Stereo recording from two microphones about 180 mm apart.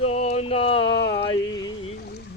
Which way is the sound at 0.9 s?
75° left (ahead or behind).